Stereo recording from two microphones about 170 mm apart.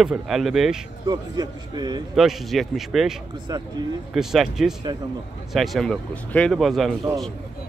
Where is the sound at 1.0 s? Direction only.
25° right (ahead or behind).